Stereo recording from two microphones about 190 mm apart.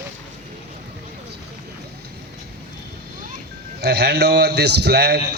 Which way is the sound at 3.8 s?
60° right (ahead or behind).